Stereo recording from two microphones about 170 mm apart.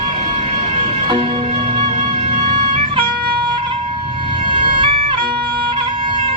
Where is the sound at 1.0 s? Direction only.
30° right (ahead or behind).